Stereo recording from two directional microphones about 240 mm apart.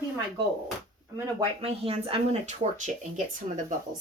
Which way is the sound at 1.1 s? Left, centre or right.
Right.